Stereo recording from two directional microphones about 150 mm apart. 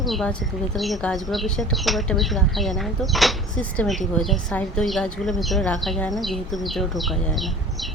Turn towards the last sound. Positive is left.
turn(degrees=0)  # may be behind; listen again after turning